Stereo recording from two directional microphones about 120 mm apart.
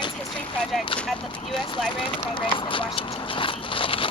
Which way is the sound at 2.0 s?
45° left (ahead or behind).